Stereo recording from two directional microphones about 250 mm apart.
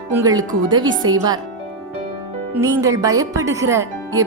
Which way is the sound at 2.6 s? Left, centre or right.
Centre.